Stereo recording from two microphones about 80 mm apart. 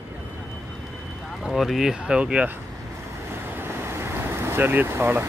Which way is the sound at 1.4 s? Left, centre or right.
Centre.